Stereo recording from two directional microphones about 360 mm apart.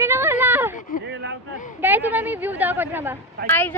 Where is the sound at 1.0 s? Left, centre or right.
Right.